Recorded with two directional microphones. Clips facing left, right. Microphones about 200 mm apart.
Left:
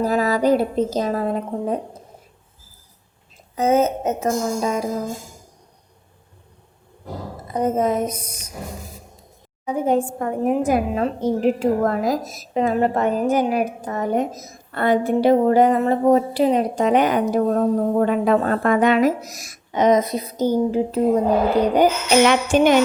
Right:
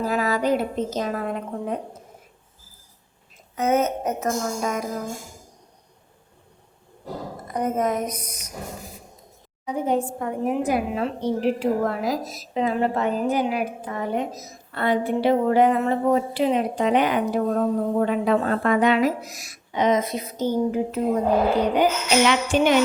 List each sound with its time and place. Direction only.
0.0 s a woman's voice: 40° left (ahead or behind)
3.5 s speech: 30° left (ahead or behind)
7.4 s speech: 25° left (ahead or behind)
9.6 s a woman's voice: 50° left (ahead or behind); by 21.0 s 30° left (ahead or behind)
22.3 s a woman's voice: 45° left (ahead or behind)